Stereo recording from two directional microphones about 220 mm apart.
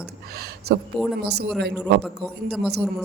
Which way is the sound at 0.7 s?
50° right (ahead or behind).